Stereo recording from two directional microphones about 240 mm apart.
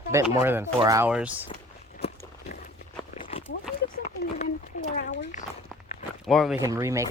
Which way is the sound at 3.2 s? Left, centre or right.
Left.